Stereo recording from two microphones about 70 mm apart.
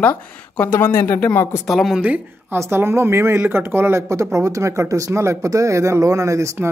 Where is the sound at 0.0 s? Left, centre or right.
Left.